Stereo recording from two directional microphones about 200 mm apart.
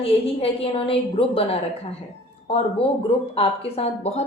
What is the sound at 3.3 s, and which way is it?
Speech, 30° left (ahead or behind).